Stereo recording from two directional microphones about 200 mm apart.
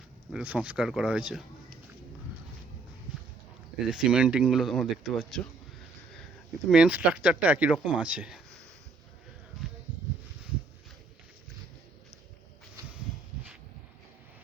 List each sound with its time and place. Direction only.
0.3 s speech: 5° right (ahead or behind)
3.8 s speech: 5° right (ahead or behind)
6.7 s speech: 5° right (ahead or behind)